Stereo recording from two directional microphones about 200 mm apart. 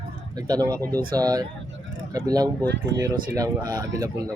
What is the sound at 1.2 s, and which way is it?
Speech, 20° right (ahead or behind).